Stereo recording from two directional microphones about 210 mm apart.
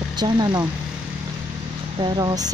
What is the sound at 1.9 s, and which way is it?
Speech, 20° right (ahead or behind).